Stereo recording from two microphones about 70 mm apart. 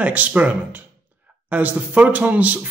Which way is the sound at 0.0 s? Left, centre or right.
Right.